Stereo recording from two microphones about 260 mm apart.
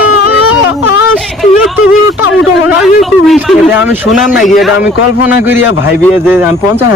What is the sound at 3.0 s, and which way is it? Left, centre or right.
A man's voice, centre.